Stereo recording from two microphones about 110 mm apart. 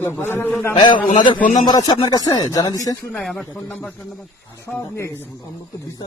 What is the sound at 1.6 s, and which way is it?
Speech, 40° left (ahead or behind).